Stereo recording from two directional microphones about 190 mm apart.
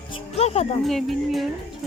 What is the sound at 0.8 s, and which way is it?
Speech, centre (ahead or behind).